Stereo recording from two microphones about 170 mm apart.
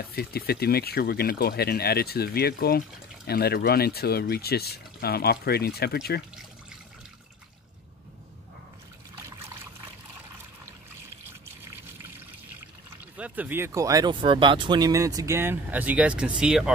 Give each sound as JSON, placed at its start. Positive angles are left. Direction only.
{"t": 0.0, "sound": "speech", "side_deg": 65}
{"t": 13.2, "sound": "speech", "side_deg": -10}